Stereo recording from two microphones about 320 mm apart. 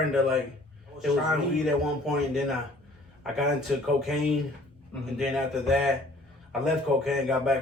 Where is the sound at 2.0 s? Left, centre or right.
Centre.